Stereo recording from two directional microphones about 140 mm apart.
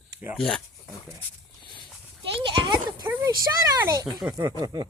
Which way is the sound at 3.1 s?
25° right (ahead or behind).